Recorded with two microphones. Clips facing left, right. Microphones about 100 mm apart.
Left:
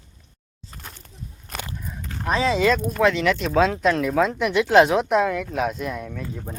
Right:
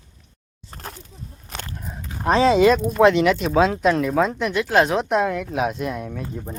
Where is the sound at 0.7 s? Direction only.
35° right (ahead or behind).